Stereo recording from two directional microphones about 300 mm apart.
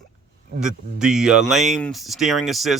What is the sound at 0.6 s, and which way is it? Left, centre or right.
Speech, centre.